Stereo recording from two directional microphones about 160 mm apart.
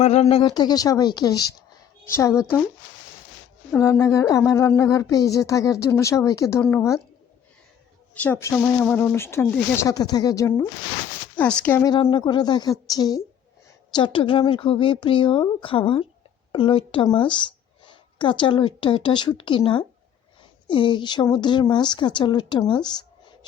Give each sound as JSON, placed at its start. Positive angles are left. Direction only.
{"t": 0.0, "sound": "a woman's voice", "side_deg": 40}
{"t": 0.4, "sound": "speech", "side_deg": 25}
{"t": 3.7, "sound": "speech", "side_deg": 15}
{"t": 8.1, "sound": "speech", "side_deg": 10}
{"t": 11.3, "sound": "speech", "side_deg": 10}
{"t": 12.1, "sound": "a woman's voice", "side_deg": 30}